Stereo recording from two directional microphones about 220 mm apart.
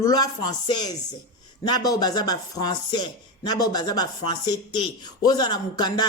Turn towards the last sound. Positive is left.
turn(degrees=20)  # may be behind; listen again after turning